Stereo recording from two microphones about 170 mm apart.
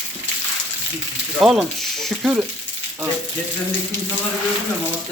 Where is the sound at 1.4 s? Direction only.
Centre (ahead or behind).